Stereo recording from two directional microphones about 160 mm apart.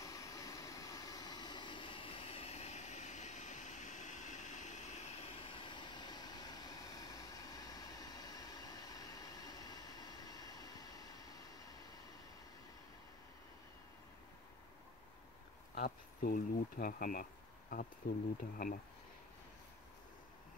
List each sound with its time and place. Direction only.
0.0 s vehicle: 20° left (ahead or behind)
15.7 s speech: 70° left (ahead or behind)